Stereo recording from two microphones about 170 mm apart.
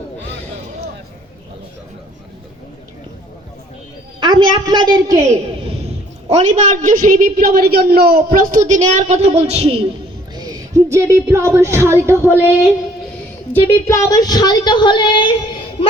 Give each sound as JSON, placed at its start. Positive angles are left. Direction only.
{"t": 4.2, "sound": "a woman's voice", "side_deg": -25}
{"t": 5.8, "sound": "a man's voice", "side_deg": -40}
{"t": 8.3, "sound": "a woman's voice", "side_deg": -55}
{"t": 10.3, "sound": "a woman's voice", "side_deg": -20}
{"t": 13.5, "sound": "a woman's voice", "side_deg": 10}